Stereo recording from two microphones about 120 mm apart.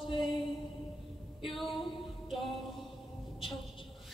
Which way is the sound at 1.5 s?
Centre (ahead or behind).